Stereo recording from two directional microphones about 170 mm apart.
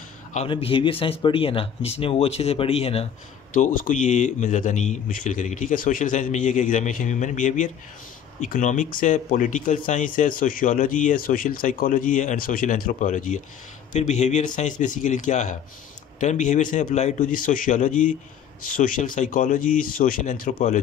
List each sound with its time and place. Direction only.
0.5 s speech: 30° left (ahead or behind)
3.5 s speech: 50° left (ahead or behind)